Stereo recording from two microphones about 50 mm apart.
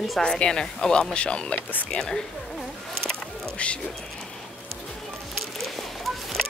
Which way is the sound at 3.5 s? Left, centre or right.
Left.